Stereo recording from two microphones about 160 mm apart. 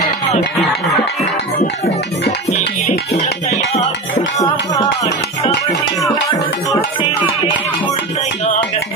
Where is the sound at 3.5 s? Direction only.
40° left (ahead or behind).